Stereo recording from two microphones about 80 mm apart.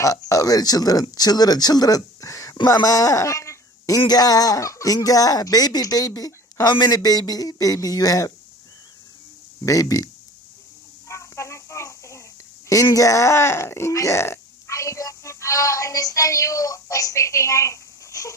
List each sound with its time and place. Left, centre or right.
0.0 s a man's voice: left
4.0 s speech: left
9.6 s speech: left
11.1 s a sound: left
12.6 s speech: left